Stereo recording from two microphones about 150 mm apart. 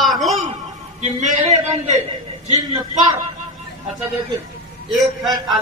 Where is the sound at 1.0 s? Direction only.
50° right (ahead or behind).